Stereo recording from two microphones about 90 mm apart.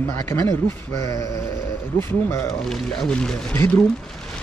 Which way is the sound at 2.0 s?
25° left (ahead or behind).